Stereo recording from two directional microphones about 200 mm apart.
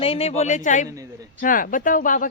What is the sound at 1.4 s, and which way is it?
Speech, 45° left (ahead or behind).